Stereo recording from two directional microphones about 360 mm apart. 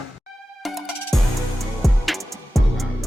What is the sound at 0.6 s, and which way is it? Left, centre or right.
Music, centre.